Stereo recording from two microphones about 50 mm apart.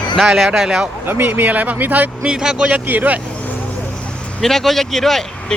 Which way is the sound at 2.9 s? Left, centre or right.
Right.